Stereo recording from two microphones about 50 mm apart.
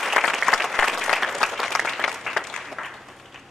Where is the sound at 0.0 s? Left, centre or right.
Centre.